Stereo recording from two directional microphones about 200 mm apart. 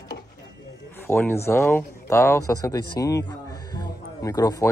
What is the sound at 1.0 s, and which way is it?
Speech, 10° left (ahead or behind).